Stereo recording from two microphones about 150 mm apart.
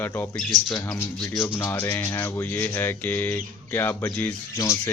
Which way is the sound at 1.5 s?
15° left (ahead or behind).